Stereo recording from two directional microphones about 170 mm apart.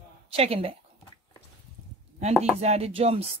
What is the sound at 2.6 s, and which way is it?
Speech, 40° right (ahead or behind).